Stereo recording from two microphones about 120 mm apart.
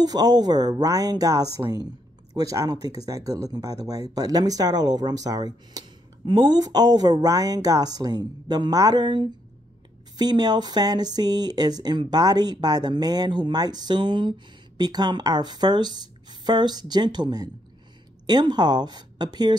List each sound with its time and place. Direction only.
0.0 s speech: 35° right (ahead or behind)